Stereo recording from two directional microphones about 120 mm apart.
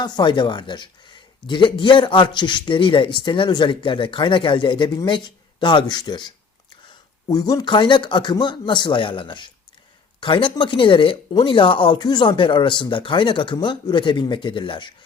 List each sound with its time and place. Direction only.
0.0 s speech: 40° left (ahead or behind)
10.2 s a sound: 45° left (ahead or behind)
10.5 s speech: 45° left (ahead or behind)